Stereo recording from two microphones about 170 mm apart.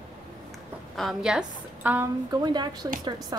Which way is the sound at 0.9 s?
Centre (ahead or behind).